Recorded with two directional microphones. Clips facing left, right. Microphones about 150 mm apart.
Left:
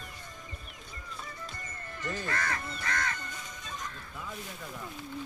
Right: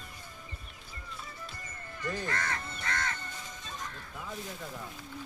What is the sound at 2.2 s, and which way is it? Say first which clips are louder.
Crow: left 1 dB; 25° right (ahead or behind).